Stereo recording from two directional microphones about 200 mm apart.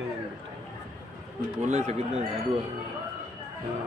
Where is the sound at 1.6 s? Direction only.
35° right (ahead or behind).